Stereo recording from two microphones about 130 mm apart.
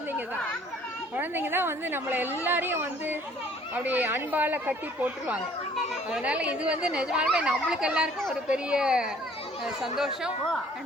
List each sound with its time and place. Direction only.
1.1 s speech: 15° right (ahead or behind)
5.7 s a woman's voice: centre (ahead or behind)